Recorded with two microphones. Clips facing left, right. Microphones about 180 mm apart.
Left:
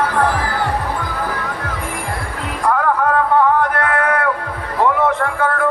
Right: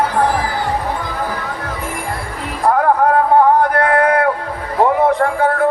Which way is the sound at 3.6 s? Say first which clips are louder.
Right 4 dB; 35° right (ahead or behind).